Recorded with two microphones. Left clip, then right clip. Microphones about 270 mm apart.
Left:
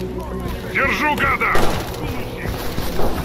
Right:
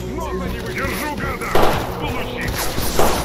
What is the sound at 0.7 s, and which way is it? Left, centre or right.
Vehicle, left.